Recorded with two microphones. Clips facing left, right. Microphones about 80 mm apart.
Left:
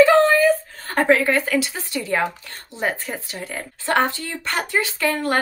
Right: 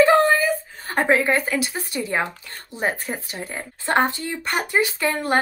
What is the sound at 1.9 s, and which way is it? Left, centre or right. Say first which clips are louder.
Speech: left 2 dB; right.